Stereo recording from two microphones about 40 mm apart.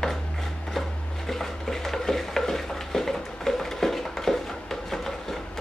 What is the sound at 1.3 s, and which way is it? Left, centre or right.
Stir, centre.